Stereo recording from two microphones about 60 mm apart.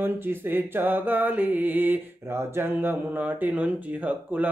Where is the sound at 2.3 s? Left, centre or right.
Right.